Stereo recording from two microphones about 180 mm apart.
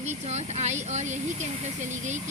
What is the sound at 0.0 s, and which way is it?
A woman's voice, 40° right (ahead or behind).